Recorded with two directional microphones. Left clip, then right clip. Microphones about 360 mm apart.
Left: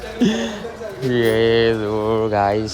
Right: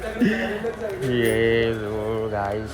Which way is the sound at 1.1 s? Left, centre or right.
Centre.